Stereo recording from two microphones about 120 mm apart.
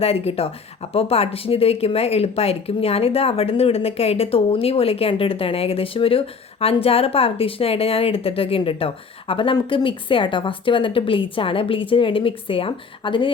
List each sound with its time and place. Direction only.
0.0 s speech: 55° left (ahead or behind)